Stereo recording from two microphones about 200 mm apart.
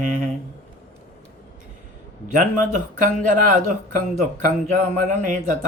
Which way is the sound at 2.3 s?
40° right (ahead or behind).